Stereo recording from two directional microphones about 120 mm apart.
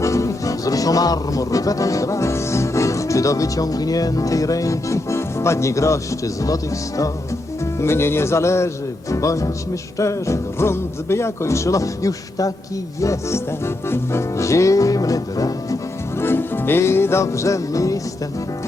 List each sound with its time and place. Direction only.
0.0 s music: 25° left (ahead or behind)
7.6 s speech: 20° left (ahead or behind)
10.0 s music: 25° left (ahead or behind)